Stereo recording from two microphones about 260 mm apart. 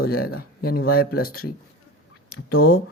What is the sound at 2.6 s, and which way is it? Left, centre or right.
Speech, left.